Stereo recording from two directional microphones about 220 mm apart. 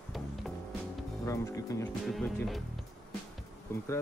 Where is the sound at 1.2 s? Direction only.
15° left (ahead or behind).